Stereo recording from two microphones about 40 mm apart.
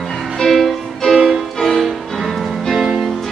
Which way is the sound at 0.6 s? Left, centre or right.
Centre.